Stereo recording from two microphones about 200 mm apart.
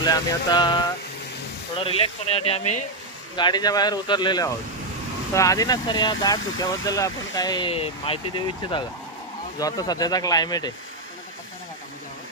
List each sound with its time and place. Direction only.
0.0 s speech: 20° left (ahead or behind)
9.6 s speech: 20° left (ahead or behind)